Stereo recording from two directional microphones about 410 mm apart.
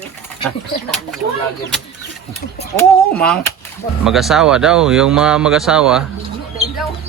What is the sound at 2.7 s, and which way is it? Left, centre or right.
Speech, centre.